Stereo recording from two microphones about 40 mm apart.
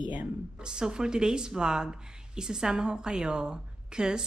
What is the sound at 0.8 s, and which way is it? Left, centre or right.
A woman's voice, centre.